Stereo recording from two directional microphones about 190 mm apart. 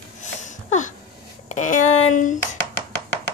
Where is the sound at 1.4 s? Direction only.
40° left (ahead or behind).